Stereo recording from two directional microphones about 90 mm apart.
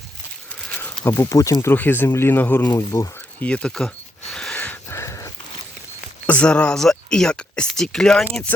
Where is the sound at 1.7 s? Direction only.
20° left (ahead or behind).